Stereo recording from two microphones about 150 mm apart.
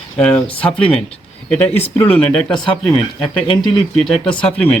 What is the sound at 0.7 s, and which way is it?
Speech, 35° left (ahead or behind).